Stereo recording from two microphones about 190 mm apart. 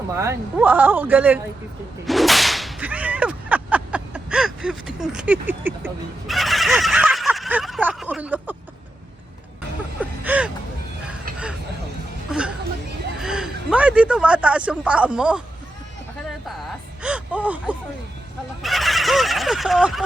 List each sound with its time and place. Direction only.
0.1 s speech: 15° right (ahead or behind)
2.0 s whip: centre (ahead or behind)
6.3 s speech: centre (ahead or behind)
10.0 s vehicle: 10° right (ahead or behind)
12.3 s a sound: 5° right (ahead or behind)
13.1 s speech: 5° right (ahead or behind)
17.0 s gasp: 5° right (ahead or behind)
18.6 s fowl: centre (ahead or behind)